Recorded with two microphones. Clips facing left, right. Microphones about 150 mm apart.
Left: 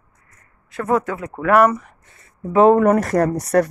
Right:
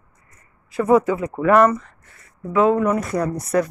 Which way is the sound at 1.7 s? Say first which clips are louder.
Even; 15° left (ahead or behind).